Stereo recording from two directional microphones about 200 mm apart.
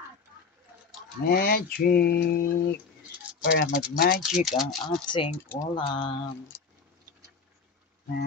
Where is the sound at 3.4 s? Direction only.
55° left (ahead or behind).